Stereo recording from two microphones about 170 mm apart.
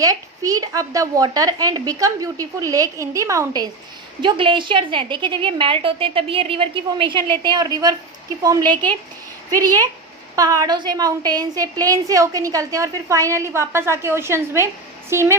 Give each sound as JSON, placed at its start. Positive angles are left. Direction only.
{"t": 0.0, "sound": "a woman's voice", "side_deg": -20}
{"t": 8.7, "sound": "speech", "side_deg": 10}
{"t": 9.5, "sound": "a woman's voice", "side_deg": -20}